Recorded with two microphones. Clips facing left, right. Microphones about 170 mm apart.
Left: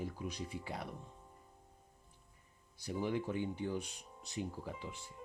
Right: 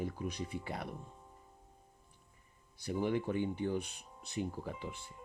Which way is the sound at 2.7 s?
60° right (ahead or behind).